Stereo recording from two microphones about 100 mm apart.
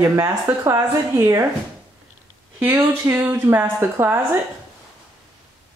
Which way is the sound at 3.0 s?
20° right (ahead or behind).